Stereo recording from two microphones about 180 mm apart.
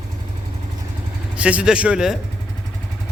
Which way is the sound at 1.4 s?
5° right (ahead or behind).